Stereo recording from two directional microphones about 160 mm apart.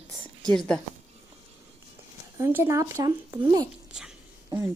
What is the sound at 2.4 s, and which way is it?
Speech, 15° right (ahead or behind).